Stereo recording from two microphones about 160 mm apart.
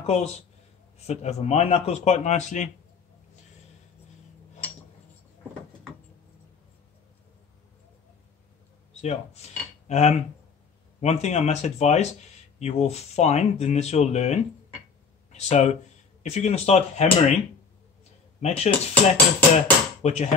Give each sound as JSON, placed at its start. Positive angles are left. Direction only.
{"t": 0.0, "sound": "speech", "side_deg": 40}
{"t": 9.0, "sound": "speech", "side_deg": 45}
{"t": 18.4, "sound": "speech", "side_deg": 45}